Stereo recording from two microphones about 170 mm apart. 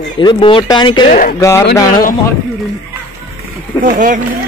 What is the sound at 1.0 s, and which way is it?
Speech, 50° left (ahead or behind).